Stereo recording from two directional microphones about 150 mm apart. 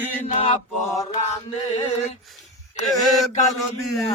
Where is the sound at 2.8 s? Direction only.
Centre (ahead or behind).